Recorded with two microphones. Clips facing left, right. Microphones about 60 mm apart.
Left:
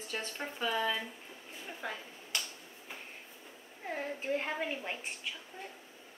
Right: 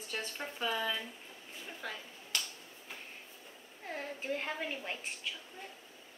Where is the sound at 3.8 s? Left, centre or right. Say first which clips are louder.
Left 3 dB; centre.